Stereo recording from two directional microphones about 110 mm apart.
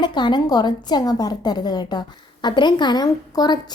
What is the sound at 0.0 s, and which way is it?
A woman's voice, 45° left (ahead or behind).